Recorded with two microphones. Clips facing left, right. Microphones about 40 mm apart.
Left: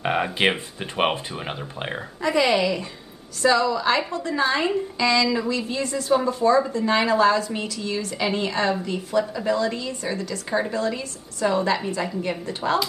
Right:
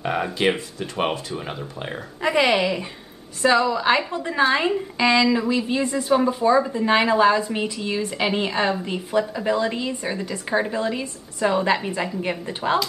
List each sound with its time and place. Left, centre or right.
0.0 s speech: left
2.2 s a woman's voice: right